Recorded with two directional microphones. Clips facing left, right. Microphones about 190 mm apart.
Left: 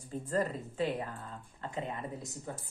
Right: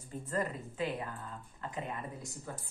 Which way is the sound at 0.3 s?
35° left (ahead or behind).